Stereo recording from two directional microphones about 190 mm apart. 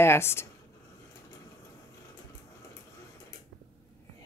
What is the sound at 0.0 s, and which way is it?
Speech, 15° left (ahead or behind).